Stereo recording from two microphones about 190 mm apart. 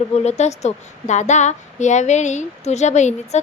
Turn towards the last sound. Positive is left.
turn(degrees=35)  # may be behind; listen again after turning